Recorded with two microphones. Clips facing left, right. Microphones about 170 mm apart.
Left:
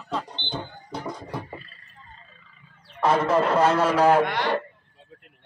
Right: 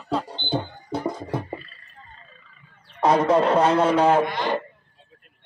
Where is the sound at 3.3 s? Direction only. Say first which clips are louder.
Right 2 dB; 30° right (ahead or behind).